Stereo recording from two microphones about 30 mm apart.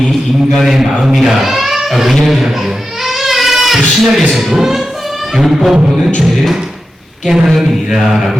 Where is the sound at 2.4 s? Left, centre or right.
Centre.